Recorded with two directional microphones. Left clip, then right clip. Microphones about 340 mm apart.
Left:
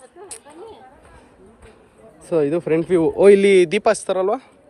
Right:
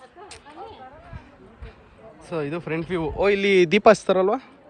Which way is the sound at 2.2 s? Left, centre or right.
Centre.